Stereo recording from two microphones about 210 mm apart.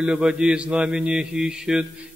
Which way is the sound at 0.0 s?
5° right (ahead or behind).